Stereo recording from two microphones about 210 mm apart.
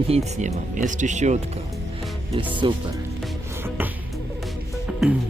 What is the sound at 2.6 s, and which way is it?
Speech, 20° right (ahead or behind).